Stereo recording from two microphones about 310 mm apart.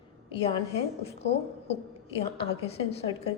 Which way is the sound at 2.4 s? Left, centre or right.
Centre.